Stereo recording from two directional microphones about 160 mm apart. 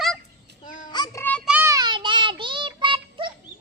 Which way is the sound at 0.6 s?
55° left (ahead or behind).